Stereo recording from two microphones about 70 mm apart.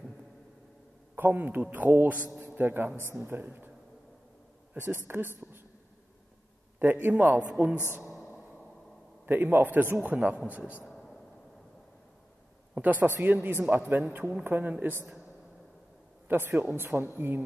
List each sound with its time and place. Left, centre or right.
1.1 s a man's voice: right
2.4 s a sound: right
3.1 s a man's voice: right
4.7 s speech: right
6.8 s a man's voice: right
9.2 s a man's voice: right
10.9 s a sound: centre
12.7 s a man's voice: right
16.3 s speech: right